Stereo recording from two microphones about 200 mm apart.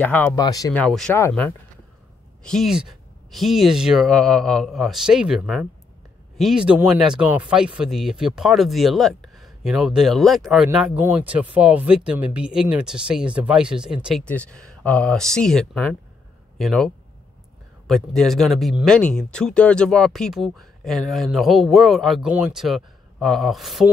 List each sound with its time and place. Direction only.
0.0 s speech: 10° left (ahead or behind)
0.7 s speech: 5° left (ahead or behind)